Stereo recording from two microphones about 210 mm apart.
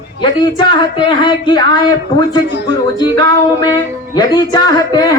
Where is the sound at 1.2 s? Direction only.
20° left (ahead or behind).